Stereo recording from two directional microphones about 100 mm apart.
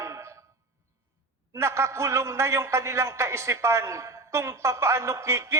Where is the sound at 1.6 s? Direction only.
25° right (ahead or behind).